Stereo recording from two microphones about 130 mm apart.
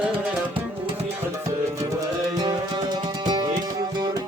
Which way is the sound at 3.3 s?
30° right (ahead or behind).